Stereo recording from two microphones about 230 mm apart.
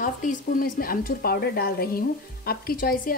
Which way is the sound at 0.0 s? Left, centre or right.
Left.